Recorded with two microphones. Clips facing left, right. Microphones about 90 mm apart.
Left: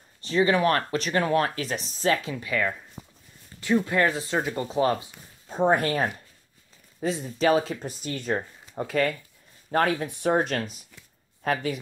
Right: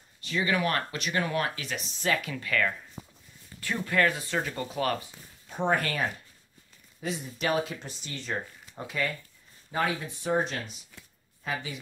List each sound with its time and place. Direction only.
0.2 s speech: 35° left (ahead or behind)
2.3 s speech: 15° left (ahead or behind); by 7.9 s 35° left (ahead or behind)
7.9 s speech: 45° left (ahead or behind)
9.7 s speech: 55° left (ahead or behind)